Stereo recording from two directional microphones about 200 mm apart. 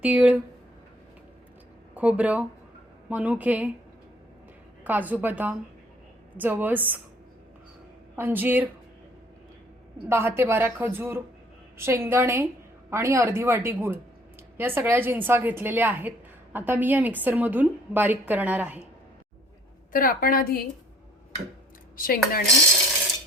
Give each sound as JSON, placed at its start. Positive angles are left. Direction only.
{"t": 0.0, "sound": "a woman's voice", "side_deg": -5}
{"t": 2.0, "sound": "a woman's voice", "side_deg": -5}
{"t": 4.8, "sound": "a woman's voice", "side_deg": -10}
{"t": 8.1, "sound": "a woman's voice", "side_deg": -10}
{"t": 10.1, "sound": "a woman's voice", "side_deg": -10}
{"t": 19.9, "sound": "a woman's voice", "side_deg": 45}
{"t": 21.9, "sound": "a woman's voice", "side_deg": 45}